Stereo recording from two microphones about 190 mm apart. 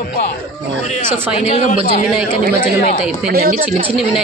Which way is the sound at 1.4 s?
30° left (ahead or behind).